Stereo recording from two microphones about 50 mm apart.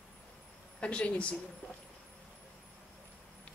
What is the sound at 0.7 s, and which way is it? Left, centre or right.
Speech, left.